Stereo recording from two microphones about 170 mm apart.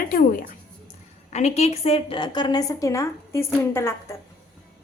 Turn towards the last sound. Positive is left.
turn(degrees=15)  # may be behind; listen again after turning